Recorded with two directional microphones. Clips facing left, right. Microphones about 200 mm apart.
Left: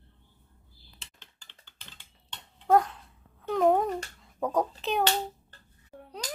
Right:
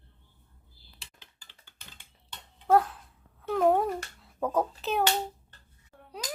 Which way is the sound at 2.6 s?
Centre (ahead or behind).